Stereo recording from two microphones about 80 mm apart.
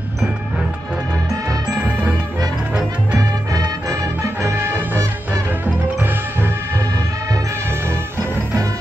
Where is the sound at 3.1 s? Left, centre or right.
Right.